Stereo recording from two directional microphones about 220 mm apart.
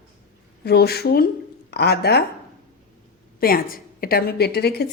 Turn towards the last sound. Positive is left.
turn(degrees=45)  # may be behind; listen again after turning